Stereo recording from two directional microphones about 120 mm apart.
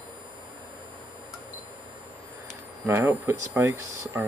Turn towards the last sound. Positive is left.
turn(degrees=-20)  # may be behind; listen again after turning